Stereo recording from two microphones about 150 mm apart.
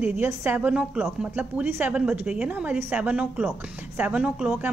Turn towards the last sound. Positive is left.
turn(degrees=-5)  # may be behind; listen again after turning